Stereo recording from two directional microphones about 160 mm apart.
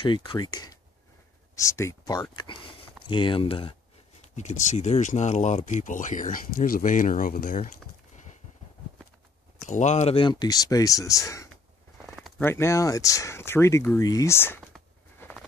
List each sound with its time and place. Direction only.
0.0 s speech: 30° left (ahead or behind)
4.4 s speech: 50° left (ahead or behind)
9.7 s speech: 50° left (ahead or behind)
10.1 s speech: 25° left (ahead or behind)
12.0 s a sound: centre (ahead or behind)
12.4 s speech: 15° left (ahead or behind)
15.1 s a sound: 10° left (ahead or behind)